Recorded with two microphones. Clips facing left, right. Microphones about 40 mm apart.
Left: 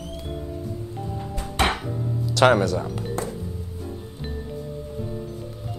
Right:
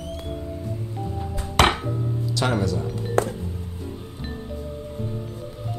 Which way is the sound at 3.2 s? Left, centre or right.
Right.